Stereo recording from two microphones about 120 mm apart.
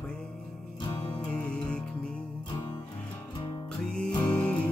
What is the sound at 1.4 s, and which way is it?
Music, 10° left (ahead or behind).